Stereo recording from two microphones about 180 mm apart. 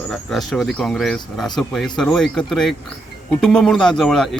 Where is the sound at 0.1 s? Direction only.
Centre (ahead or behind).